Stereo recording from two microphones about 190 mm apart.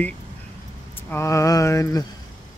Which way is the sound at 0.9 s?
15° left (ahead or behind).